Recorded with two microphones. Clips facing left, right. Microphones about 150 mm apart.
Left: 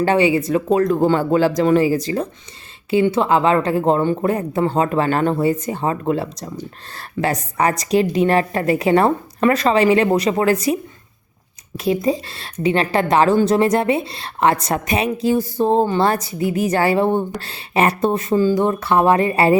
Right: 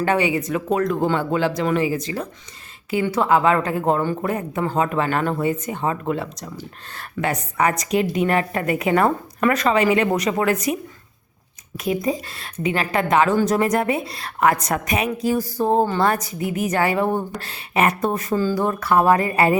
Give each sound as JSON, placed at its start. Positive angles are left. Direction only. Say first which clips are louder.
{"t": 0.0, "sound": "a woman's voice", "louder": "left 4 dB", "side_deg": 30}
{"t": 2.9, "sound": "a woman's voice", "louder": "left 3 dB", "side_deg": 25}
{"t": 11.8, "sound": "a woman's voice", "louder": "left 4 dB", "side_deg": 30}